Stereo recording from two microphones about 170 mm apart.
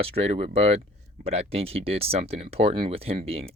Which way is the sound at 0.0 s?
35° right (ahead or behind).